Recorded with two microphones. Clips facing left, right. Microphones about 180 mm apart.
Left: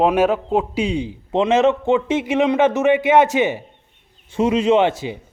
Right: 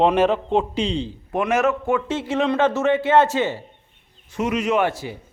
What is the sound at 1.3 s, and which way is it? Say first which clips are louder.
A man's voice: left 5 dB; 25° left (ahead or behind).